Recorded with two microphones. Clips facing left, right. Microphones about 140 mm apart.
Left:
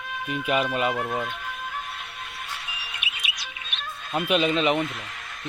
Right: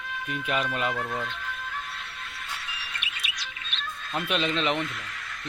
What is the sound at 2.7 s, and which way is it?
Music, 15° left (ahead or behind).